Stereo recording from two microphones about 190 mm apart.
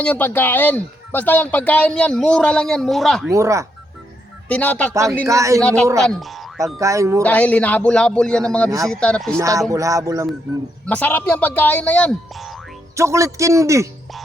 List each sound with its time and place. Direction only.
0.0 s speech: 10° left (ahead or behind)
3.3 s music: 15° right (ahead or behind)
4.4 s speech: 10° left (ahead or behind)
5.2 s music: 15° right (ahead or behind)
5.5 s speech: 5° left (ahead or behind)
6.7 s music: 15° right (ahead or behind)
7.2 s speech: 10° left (ahead or behind)
9.4 s music: 15° right (ahead or behind)
10.8 s speech: 10° left (ahead or behind)
13.0 s music: 15° right (ahead or behind)